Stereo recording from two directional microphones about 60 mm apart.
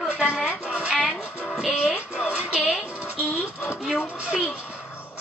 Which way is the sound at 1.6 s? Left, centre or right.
Centre.